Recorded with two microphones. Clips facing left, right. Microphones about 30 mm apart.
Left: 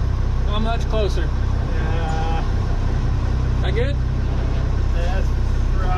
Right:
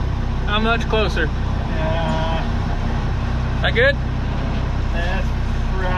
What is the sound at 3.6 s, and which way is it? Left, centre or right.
Speech, right.